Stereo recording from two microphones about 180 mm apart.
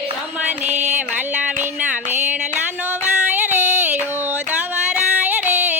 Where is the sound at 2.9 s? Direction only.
10° right (ahead or behind).